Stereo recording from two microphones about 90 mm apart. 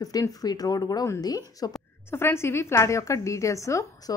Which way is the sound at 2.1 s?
30° left (ahead or behind).